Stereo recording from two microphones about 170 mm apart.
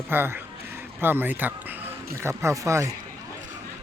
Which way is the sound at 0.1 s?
10° right (ahead or behind).